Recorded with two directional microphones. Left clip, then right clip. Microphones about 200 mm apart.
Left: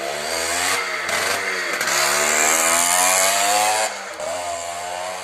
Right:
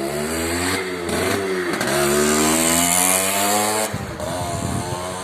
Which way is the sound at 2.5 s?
70° right (ahead or behind).